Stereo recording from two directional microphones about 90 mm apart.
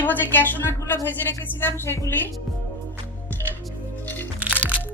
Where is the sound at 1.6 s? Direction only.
20° left (ahead or behind).